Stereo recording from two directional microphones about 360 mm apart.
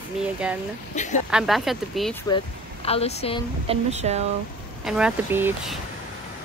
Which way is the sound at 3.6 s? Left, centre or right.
Centre.